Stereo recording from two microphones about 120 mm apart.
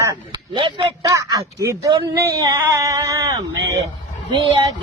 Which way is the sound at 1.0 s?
30° right (ahead or behind).